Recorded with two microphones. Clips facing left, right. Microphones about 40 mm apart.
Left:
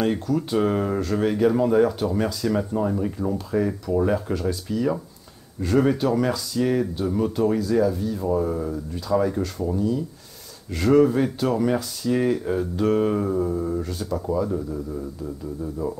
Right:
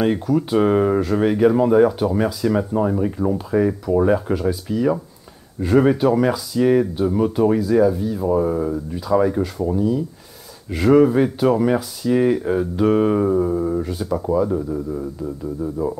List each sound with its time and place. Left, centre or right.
0.0 s speech: centre